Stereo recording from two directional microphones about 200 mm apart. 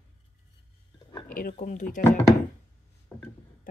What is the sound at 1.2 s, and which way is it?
Speech, 45° left (ahead or behind).